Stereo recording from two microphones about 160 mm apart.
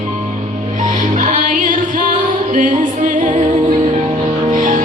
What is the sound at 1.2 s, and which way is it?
Music, 55° right (ahead or behind).